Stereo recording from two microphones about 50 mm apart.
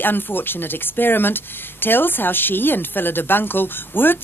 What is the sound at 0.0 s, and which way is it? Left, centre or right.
Speech, left.